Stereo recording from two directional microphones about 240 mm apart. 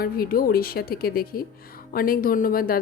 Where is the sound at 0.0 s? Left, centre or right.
Left.